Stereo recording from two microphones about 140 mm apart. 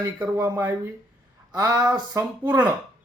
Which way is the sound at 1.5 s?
30° right (ahead or behind).